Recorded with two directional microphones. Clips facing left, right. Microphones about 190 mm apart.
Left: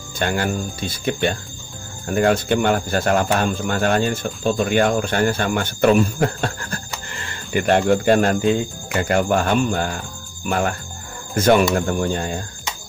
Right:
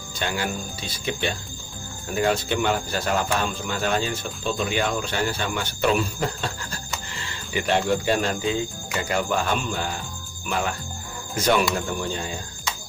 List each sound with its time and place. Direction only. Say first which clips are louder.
0.2 s speech: left 6 dB; 50° left (ahead or behind)